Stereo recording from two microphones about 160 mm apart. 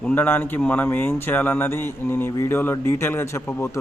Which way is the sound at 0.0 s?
10° left (ahead or behind).